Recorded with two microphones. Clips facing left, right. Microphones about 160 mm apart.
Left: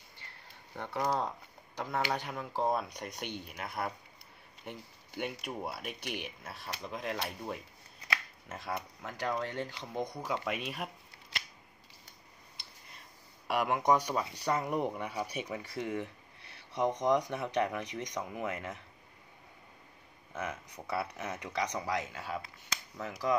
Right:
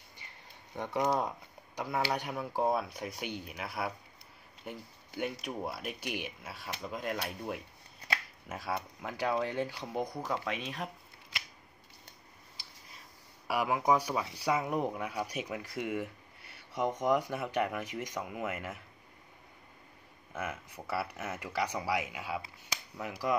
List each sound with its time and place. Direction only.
0.7 s speech: 15° right (ahead or behind); by 10.9 s 5° left (ahead or behind)
13.5 s speech: 5° right (ahead or behind)
20.3 s speech: 5° right (ahead or behind)